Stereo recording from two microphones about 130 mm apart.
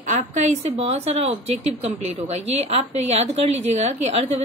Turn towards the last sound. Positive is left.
turn(degrees=-55)  # may be behind; listen again after turning